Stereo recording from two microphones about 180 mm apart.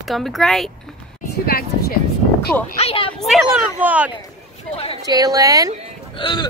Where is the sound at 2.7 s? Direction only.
35° left (ahead or behind).